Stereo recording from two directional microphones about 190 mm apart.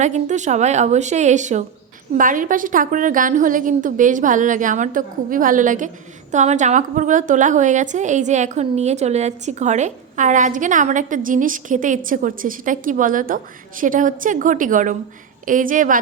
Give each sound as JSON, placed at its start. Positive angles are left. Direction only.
{"t": 0.0, "sound": "a woman's voice", "side_deg": -40}